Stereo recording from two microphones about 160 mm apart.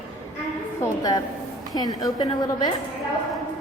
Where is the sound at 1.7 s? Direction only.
25° left (ahead or behind).